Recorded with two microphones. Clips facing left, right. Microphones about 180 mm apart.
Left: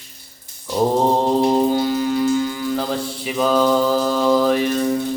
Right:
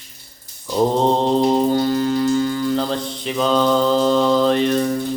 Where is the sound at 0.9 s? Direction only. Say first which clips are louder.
Left 1 dB; 10° left (ahead or behind).